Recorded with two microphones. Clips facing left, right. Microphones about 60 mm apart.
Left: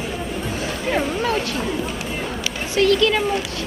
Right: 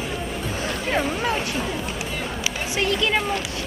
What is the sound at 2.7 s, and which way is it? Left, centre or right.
Speech, right.